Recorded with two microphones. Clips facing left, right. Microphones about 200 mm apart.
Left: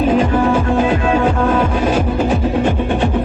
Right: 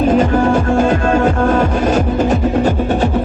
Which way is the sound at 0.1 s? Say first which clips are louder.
Right 2 dB; 45° right (ahead or behind).